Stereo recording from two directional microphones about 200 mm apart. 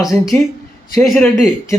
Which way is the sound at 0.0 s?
Centre (ahead or behind).